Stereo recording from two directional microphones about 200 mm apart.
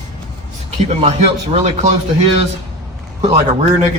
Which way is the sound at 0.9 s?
30° right (ahead or behind).